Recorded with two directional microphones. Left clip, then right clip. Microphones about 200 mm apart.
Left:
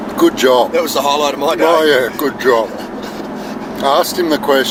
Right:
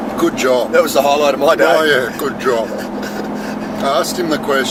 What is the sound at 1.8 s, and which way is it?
Speech, 40° left (ahead or behind).